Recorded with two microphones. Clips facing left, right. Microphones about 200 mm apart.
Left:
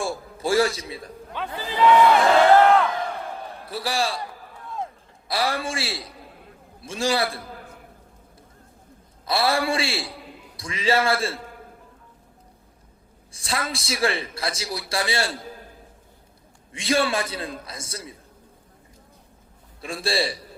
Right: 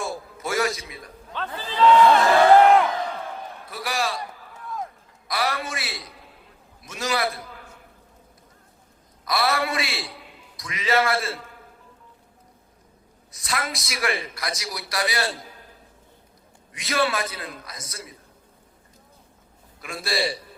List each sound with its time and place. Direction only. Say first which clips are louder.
0.0 s a sound: left 3 dB; 30° left (ahead or behind)
0.9 s a man's voice: left 6 dB; 30° left (ahead or behind)
1.3 s speech: left 1 dB; 10° left (ahead or behind)
2.6 s crowd: right 1 dB; 15° right (ahead or behind)
3.7 s a man's voice: left 2 dB; 30° left (ahead or behind)
5.3 s a man's voice: left 2 dB; 30° left (ahead or behind)
9.2 s a man's voice: left 2 dB; 30° left (ahead or behind)
13.3 s a man's voice: left 1 dB; 30° left (ahead or behind)
16.7 s a man's voice: left 2 dB; 25° left (ahead or behind)
19.8 s a man's voice: left 2 dB; 30° left (ahead or behind)